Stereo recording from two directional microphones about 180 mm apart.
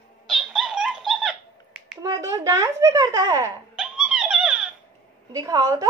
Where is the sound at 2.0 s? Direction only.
20° right (ahead or behind).